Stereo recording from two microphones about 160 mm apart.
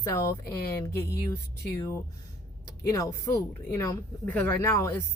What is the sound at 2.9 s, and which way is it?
A woman's voice, 20° left (ahead or behind).